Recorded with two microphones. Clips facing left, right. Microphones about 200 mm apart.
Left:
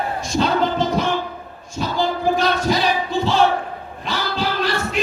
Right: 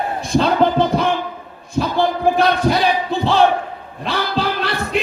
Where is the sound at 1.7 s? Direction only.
60° right (ahead or behind).